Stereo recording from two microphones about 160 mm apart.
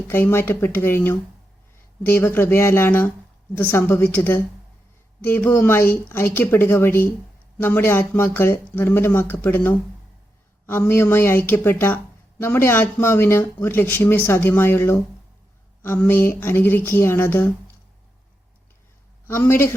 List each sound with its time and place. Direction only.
0.1 s speech: 15° left (ahead or behind)
19.3 s speech: 15° left (ahead or behind)